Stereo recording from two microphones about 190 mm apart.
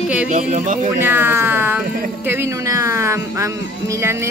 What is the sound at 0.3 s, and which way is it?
Speech, 40° right (ahead or behind).